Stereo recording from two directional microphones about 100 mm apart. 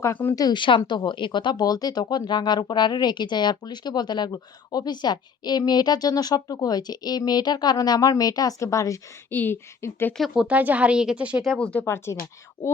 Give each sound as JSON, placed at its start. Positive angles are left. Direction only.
{"t": 0.0, "sound": "speech", "side_deg": 20}
{"t": 0.3, "sound": "a woman's voice", "side_deg": 40}
{"t": 0.8, "sound": "speech", "side_deg": 50}
{"t": 9.3, "sound": "speech", "side_deg": 20}
{"t": 10.2, "sound": "speech", "side_deg": 0}
{"t": 10.4, "sound": "speech", "side_deg": -15}
{"t": 11.4, "sound": "speech", "side_deg": 10}
{"t": 11.9, "sound": "speech", "side_deg": 25}